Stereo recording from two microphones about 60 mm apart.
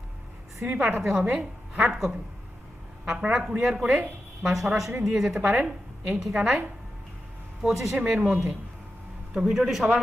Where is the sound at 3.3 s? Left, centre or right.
Centre.